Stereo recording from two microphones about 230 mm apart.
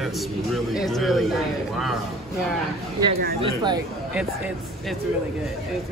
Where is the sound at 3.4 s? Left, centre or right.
Centre.